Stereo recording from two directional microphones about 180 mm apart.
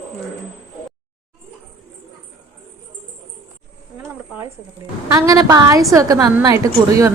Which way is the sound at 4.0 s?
15° right (ahead or behind).